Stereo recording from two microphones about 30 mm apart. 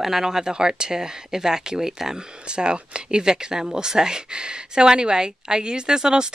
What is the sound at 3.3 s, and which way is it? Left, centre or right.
Speech, right.